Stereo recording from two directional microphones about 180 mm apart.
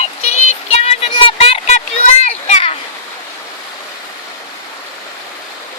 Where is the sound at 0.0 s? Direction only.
35° left (ahead or behind).